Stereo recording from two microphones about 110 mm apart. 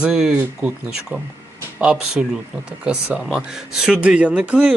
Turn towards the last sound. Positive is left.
turn(degrees=-10)  # may be behind; listen again after turning